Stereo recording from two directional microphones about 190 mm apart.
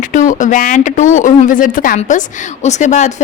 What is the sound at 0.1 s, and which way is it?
Speech, 40° left (ahead or behind).